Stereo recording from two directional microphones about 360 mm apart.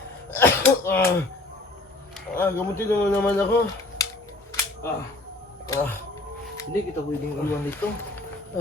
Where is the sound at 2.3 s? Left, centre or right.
Centre.